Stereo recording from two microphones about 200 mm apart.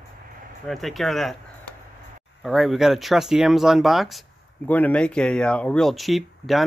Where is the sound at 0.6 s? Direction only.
Centre (ahead or behind).